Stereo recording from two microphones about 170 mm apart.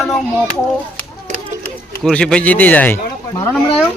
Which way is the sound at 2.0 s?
5° left (ahead or behind).